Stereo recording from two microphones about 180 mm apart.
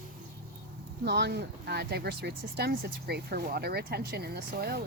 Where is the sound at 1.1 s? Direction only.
70° right (ahead or behind).